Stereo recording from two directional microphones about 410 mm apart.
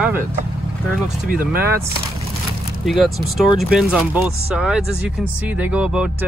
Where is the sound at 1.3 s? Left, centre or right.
Right.